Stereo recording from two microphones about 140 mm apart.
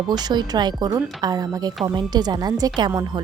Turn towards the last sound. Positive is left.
turn(degrees=-30)  # may be behind; listen again after turning